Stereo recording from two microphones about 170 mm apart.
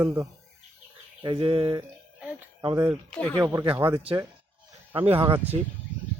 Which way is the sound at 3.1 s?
5° left (ahead or behind).